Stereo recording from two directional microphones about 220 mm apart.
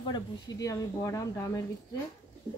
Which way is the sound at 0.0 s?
20° left (ahead or behind).